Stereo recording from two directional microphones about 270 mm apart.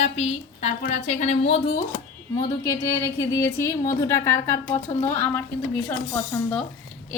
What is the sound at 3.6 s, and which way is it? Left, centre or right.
A woman's voice, centre.